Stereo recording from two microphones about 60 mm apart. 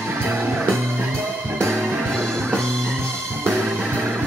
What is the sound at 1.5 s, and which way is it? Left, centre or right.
Music, right.